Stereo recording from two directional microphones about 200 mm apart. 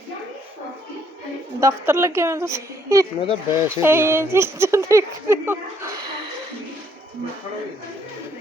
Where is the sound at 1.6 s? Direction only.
10° right (ahead or behind).